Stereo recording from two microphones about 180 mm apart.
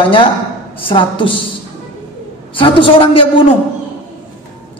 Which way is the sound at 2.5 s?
30° left (ahead or behind).